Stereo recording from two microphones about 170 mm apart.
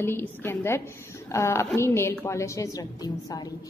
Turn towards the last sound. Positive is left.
turn(degrees=20)  # may be behind; listen again after turning